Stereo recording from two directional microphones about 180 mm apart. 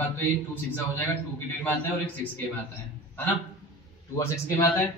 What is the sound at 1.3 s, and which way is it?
Speech, 10° left (ahead or behind).